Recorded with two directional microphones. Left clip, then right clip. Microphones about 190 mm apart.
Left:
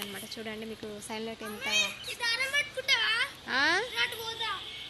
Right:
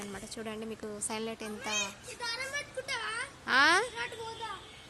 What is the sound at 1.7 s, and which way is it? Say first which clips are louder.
A child's voice: left 7 dB; 60° right (ahead or behind).